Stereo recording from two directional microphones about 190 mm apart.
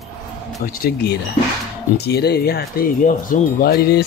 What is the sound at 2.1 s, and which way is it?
Speech, 60° left (ahead or behind).